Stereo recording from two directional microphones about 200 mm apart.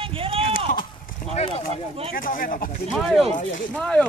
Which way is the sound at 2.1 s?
45° left (ahead or behind).